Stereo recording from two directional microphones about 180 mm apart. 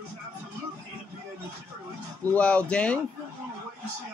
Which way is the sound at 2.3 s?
5° left (ahead or behind).